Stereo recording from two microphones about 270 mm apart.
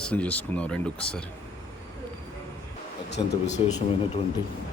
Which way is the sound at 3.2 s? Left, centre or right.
Centre.